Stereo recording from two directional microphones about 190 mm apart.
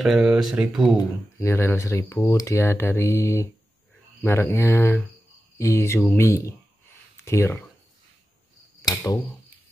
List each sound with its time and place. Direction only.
0.0 s speech: centre (ahead or behind)
0.9 s speech: 15° left (ahead or behind)
8.8 s speech: 20° left (ahead or behind)